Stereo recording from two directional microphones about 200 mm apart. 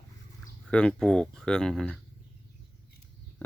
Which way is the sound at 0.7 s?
5° left (ahead or behind).